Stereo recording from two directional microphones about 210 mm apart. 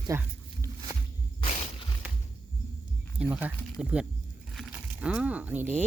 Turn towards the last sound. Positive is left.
turn(degrees=-10)  # may be behind; listen again after turning